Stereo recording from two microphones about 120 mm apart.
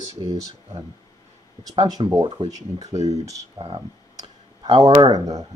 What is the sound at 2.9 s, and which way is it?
Speech, 65° right (ahead or behind).